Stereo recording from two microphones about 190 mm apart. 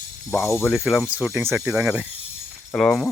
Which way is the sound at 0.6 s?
Centre (ahead or behind).